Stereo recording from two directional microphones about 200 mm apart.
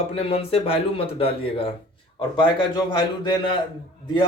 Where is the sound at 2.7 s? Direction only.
20° left (ahead or behind).